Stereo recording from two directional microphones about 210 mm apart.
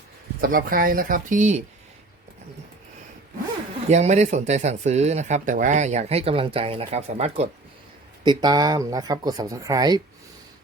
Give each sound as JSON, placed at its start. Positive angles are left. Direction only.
{"t": 0.4, "sound": "speech", "side_deg": -40}
{"t": 3.8, "sound": "speech", "side_deg": -30}